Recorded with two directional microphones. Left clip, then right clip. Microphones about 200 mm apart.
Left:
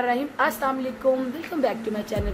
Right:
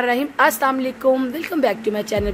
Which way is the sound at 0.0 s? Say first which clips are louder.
Right 6 dB; 55° right (ahead or behind).